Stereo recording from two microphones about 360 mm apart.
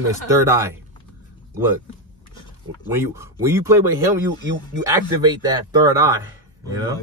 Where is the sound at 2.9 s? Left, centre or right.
Centre.